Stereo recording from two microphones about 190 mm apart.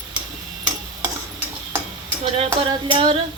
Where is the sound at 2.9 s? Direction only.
25° right (ahead or behind).